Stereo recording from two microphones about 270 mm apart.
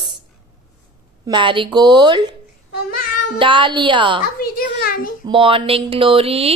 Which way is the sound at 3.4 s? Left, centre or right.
Centre.